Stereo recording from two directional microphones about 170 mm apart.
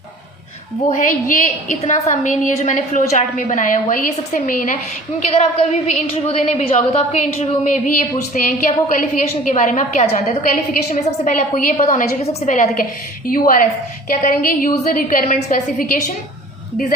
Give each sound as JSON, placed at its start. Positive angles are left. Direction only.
{"t": 0.9, "sound": "a woman's voice", "side_deg": 50}
{"t": 5.2, "sound": "a woman's voice", "side_deg": 40}
{"t": 12.2, "sound": "a woman's voice", "side_deg": 40}